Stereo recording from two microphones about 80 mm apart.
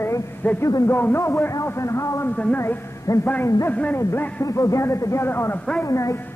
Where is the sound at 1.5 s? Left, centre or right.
Left.